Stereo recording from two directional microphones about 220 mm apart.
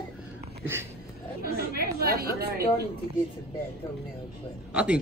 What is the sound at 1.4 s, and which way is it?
Chatter, 45° right (ahead or behind).